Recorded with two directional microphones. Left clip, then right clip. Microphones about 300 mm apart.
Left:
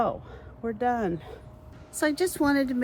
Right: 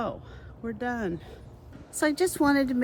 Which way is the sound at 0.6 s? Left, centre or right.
Centre.